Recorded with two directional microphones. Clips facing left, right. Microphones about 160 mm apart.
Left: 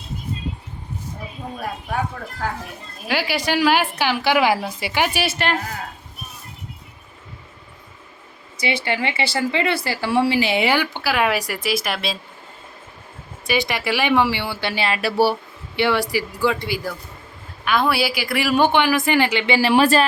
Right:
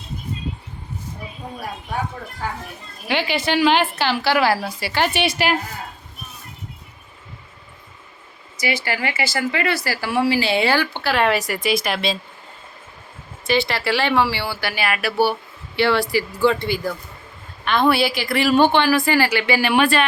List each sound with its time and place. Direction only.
3.1 s a woman's voice: 10° left (ahead or behind)
8.6 s speech: 25° left (ahead or behind); by 12.1 s centre (ahead or behind)
13.5 s a woman's voice: 15° left (ahead or behind); by 20.1 s 35° left (ahead or behind)